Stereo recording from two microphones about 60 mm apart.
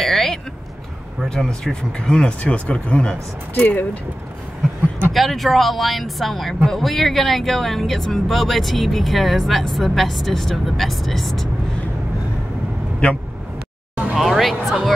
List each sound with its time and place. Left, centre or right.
0.0 s vehicle: centre
1.3 s speech: centre
5.1 s speech: centre
13.0 s speech: centre
14.1 s music: centre